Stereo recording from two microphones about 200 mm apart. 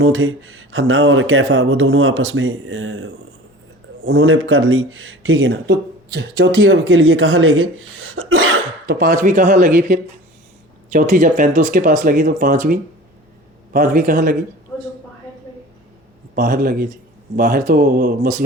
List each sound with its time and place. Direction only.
0.0 s speech: 90° right; by 6.7 s 55° right (ahead or behind)
6.8 s speech: 90° right
8.9 s speech: 45° right (ahead or behind)
10.9 s speech: 40° right (ahead or behind)
16.3 s speech: 45° right (ahead or behind)